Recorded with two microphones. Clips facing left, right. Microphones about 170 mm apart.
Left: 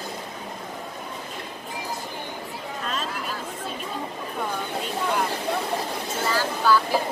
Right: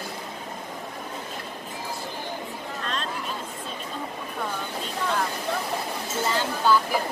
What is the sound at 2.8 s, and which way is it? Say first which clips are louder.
Chatter: left 2 dB; 5° left (ahead or behind).